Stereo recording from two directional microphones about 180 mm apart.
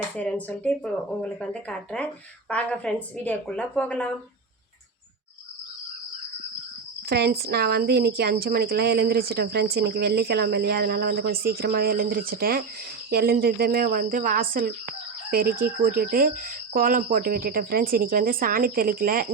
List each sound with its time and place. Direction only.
0.2 s speech: 10° left (ahead or behind)
7.1 s speech: 60° right (ahead or behind)